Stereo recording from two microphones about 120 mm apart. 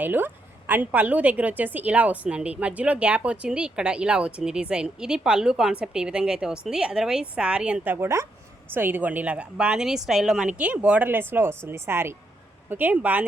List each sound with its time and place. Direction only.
0.0 s a woman's voice: 15° right (ahead or behind)
7.9 s a woman's voice: 25° right (ahead or behind)